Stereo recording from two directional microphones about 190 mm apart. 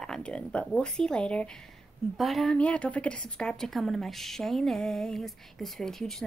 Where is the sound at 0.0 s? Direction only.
5° left (ahead or behind).